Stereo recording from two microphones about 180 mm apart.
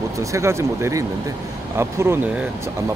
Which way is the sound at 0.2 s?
15° right (ahead or behind).